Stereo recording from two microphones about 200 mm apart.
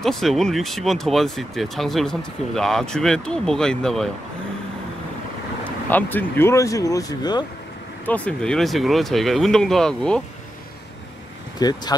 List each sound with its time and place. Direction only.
0.0 s speech: centre (ahead or behind)
5.9 s speech: 10° left (ahead or behind)
8.0 s speech: 5° left (ahead or behind)
11.6 s speech: 20° left (ahead or behind)